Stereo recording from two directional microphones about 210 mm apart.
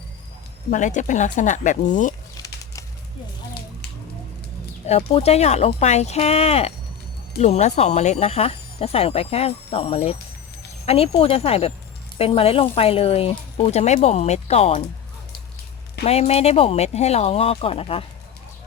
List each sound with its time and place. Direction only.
0.7 s speech: 35° left (ahead or behind)
4.9 s speech: 30° left (ahead or behind)
16.0 s speech: 30° left (ahead or behind)